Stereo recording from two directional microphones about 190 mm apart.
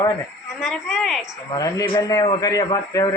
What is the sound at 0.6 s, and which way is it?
Speech, centre (ahead or behind).